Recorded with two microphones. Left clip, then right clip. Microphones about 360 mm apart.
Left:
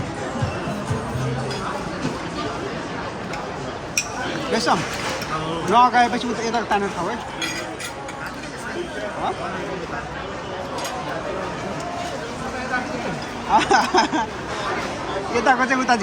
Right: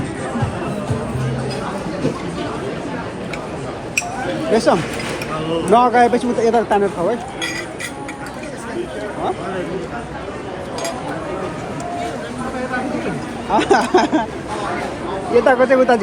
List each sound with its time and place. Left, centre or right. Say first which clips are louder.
4.5 s speech: right 5 dB; centre
13.5 s speech: right 2 dB; centre
15.4 s speech: right 6 dB; centre